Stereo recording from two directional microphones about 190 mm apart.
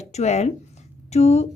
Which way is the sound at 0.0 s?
35° left (ahead or behind).